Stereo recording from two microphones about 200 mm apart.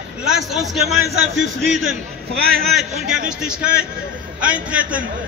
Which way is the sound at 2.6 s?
Centre (ahead or behind).